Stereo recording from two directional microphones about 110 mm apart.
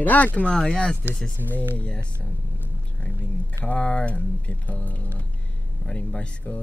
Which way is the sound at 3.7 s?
10° left (ahead or behind).